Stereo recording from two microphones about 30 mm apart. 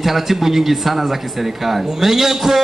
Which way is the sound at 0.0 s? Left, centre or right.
Centre.